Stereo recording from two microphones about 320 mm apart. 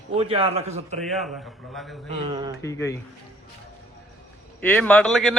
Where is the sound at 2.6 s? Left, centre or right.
Centre.